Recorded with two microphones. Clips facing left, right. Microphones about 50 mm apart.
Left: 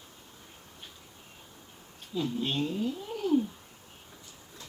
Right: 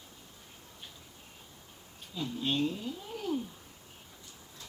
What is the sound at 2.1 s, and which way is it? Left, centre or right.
Speech, left.